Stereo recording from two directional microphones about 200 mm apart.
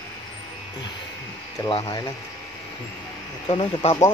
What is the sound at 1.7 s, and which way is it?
Speech, 20° left (ahead or behind).